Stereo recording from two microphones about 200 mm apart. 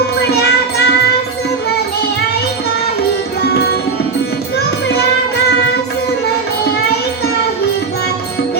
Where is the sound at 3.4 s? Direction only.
55° left (ahead or behind).